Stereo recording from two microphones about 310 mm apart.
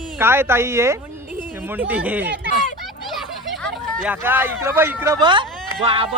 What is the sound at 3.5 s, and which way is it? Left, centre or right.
Speech, centre.